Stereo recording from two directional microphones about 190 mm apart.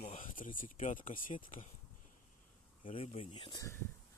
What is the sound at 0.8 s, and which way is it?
Speech, 40° left (ahead or behind).